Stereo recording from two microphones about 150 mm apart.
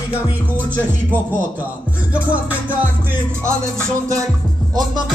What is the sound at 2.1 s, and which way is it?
Music, 10° right (ahead or behind).